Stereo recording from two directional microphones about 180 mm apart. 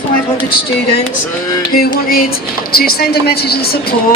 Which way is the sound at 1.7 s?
55° left (ahead or behind).